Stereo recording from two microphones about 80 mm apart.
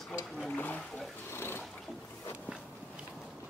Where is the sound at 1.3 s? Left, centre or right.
Left.